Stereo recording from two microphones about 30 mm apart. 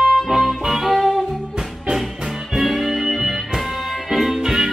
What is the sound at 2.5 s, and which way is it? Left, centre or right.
Music, centre.